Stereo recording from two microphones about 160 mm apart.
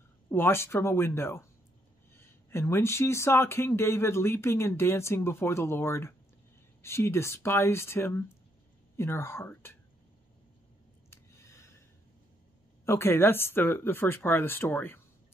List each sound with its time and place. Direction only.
0.3 s speech: 15° left (ahead or behind)
11.1 s a sound: 20° left (ahead or behind)
12.8 s speech: 15° left (ahead or behind)